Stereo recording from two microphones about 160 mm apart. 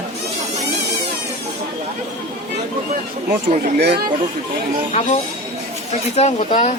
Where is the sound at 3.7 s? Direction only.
90° right.